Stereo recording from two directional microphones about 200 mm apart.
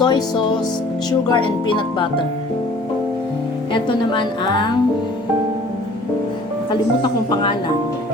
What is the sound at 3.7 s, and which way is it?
A woman's voice, 25° left (ahead or behind).